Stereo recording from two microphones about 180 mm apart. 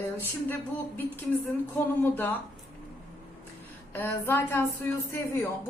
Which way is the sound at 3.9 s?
10° left (ahead or behind).